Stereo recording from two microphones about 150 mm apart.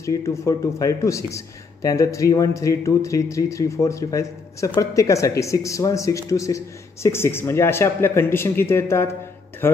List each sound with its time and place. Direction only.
0.0 s a man's voice: 20° left (ahead or behind)